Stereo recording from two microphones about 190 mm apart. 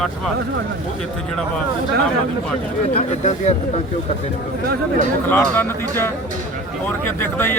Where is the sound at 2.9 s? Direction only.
35° left (ahead or behind).